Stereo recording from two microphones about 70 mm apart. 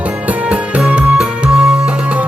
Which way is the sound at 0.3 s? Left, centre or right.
Right.